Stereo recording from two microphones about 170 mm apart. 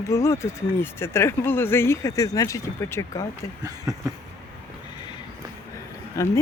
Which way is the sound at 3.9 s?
20° right (ahead or behind).